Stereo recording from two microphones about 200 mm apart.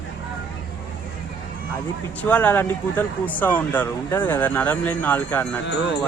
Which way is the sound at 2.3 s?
10° left (ahead or behind).